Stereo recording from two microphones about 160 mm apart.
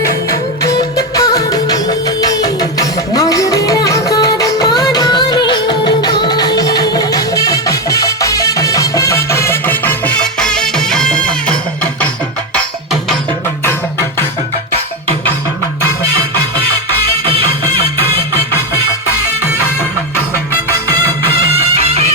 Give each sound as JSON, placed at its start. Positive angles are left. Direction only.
{"t": 0.6, "sound": "music", "side_deg": 20}
{"t": 12.5, "sound": "music", "side_deg": 0}
{"t": 21.8, "sound": "music", "side_deg": -40}